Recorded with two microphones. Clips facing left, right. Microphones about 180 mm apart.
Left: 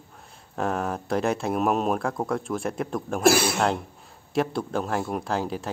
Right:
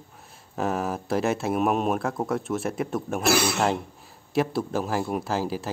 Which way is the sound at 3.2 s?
50° left (ahead or behind).